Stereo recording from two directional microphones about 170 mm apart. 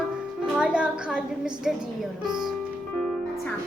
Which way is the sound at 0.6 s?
5° right (ahead or behind).